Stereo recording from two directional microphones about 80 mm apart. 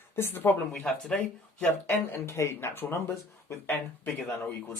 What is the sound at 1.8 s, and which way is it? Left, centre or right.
Speech, left.